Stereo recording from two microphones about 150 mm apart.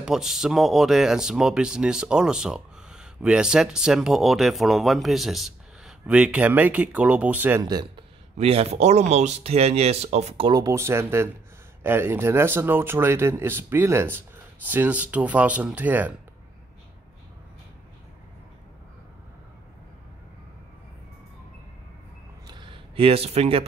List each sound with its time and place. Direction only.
0.0 s speech: 5° right (ahead or behind)
7.6 s speech: 25° right (ahead or behind)
8.4 s speech: 45° right (ahead or behind)
10.5 s speech: 20° right (ahead or behind)
22.5 s a sound: 35° right (ahead or behind)